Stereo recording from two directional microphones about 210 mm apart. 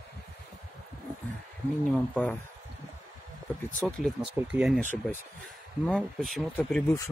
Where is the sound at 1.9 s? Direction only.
5° left (ahead or behind).